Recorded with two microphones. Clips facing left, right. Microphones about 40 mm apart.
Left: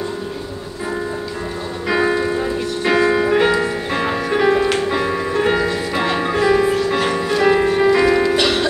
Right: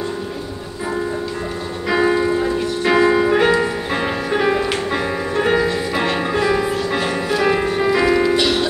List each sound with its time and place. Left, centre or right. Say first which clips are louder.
1.9 s music: right 1 dB; centre
8.4 s music: even; left